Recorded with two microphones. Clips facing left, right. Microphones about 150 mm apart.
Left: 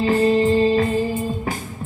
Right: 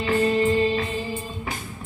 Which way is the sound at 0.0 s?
35° left (ahead or behind).